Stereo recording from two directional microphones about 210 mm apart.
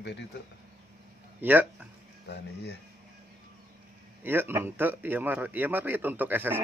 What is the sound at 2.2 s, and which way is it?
Speech, 50° left (ahead or behind).